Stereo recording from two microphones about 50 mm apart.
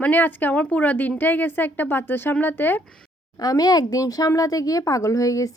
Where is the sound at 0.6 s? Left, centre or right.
Left.